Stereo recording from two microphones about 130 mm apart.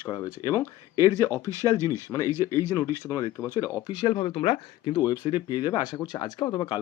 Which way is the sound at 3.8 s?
40° left (ahead or behind).